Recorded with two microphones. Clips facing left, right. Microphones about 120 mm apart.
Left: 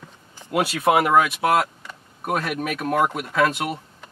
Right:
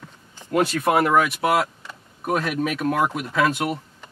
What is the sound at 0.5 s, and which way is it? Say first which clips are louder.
Speech: even; 10° left (ahead or behind).